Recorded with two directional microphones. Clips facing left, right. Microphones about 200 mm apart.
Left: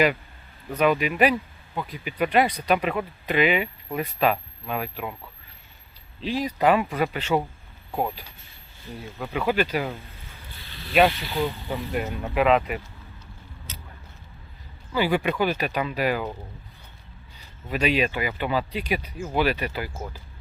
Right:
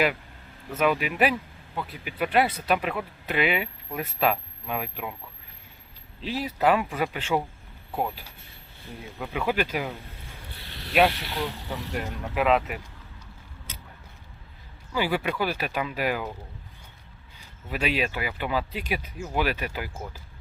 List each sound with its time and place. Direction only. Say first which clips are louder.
0.7 s speech: left 3 dB; 5° right (ahead or behind)
6.2 s speech: left 2 dB; 10° right (ahead or behind)
10.5 s boat: even; 65° right (ahead or behind)
11.2 s speech: left 4 dB; 75° right (ahead or behind)
11.9 s speech: left 4 dB; centre (ahead or behind)
14.9 s speech: left 3 dB; 10° right (ahead or behind)
17.4 s speech: left 4 dB; 5° right (ahead or behind)